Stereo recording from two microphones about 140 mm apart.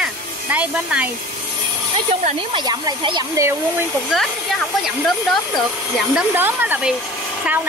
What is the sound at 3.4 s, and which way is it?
Speech, 20° right (ahead or behind).